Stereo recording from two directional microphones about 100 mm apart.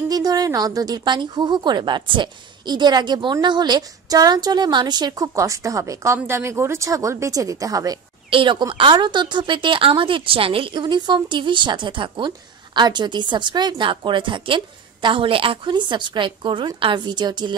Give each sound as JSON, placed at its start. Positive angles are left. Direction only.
{"t": 0.1, "sound": "speech", "side_deg": -40}
{"t": 8.3, "sound": "a woman's voice", "side_deg": -55}